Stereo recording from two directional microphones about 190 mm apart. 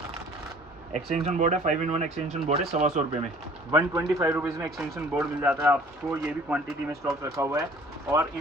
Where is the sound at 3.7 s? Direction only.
15° right (ahead or behind).